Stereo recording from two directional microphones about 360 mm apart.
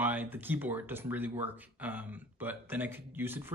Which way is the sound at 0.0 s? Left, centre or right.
Centre.